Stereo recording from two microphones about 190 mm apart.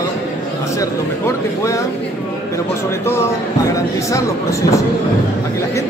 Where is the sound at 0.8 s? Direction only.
15° left (ahead or behind).